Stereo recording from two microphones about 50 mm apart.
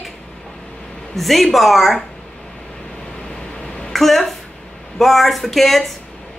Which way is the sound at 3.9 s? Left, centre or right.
Centre.